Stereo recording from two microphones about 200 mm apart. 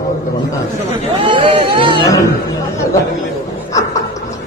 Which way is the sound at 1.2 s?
25° right (ahead or behind).